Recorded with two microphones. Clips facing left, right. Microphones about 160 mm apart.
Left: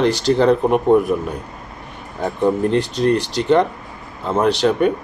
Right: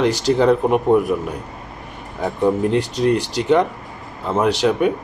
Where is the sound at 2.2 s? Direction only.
5° right (ahead or behind).